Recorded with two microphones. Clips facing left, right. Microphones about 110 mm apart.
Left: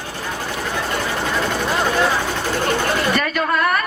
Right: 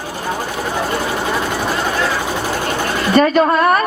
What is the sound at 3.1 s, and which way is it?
Speech, 30° right (ahead or behind).